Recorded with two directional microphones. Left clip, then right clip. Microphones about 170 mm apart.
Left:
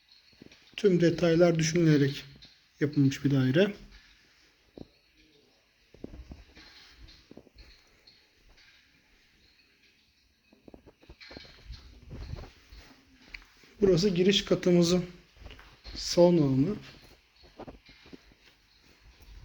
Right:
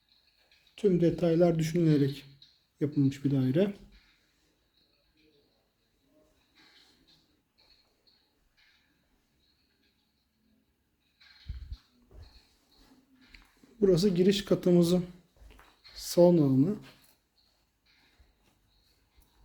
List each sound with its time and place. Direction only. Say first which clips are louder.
0.8 s speech: left 2 dB; 5° right (ahead or behind)
13.8 s speech: left 1 dB; 35° right (ahead or behind)
16.0 s speech: even; 30° right (ahead or behind)